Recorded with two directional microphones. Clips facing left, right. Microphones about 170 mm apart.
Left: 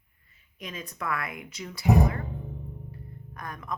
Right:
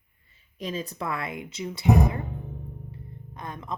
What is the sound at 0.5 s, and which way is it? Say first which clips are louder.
Speech: right 7 dB; 30° right (ahead or behind).